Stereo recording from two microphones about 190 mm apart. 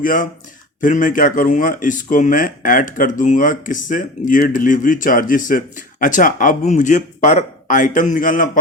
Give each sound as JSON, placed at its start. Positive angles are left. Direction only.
{"t": 0.0, "sound": "speech", "side_deg": 45}